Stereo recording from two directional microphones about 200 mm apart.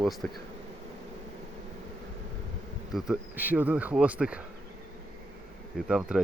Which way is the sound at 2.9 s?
5° right (ahead or behind).